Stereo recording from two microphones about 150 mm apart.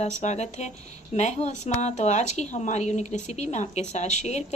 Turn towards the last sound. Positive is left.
turn(degrees=50)  # may be behind; listen again after turning